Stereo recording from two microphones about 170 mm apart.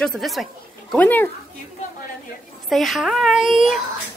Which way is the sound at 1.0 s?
10° left (ahead or behind).